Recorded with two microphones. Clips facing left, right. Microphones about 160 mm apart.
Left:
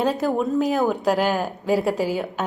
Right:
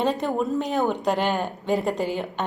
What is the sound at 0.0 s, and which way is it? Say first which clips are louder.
A woman's voice: left 2 dB; centre (ahead or behind).